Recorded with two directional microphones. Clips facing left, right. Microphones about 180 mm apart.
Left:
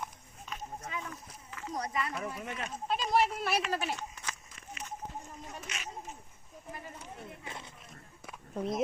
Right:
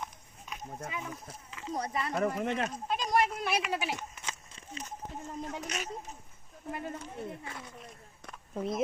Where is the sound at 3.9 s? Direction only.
20° right (ahead or behind).